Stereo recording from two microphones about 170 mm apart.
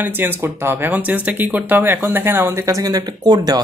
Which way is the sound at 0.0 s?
10° right (ahead or behind).